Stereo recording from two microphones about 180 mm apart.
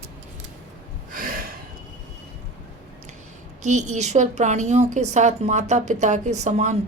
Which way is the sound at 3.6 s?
40° right (ahead or behind).